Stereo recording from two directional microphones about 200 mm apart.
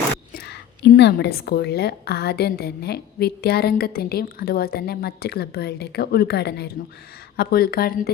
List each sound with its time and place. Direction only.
0.3 s a woman's voice: 55° left (ahead or behind)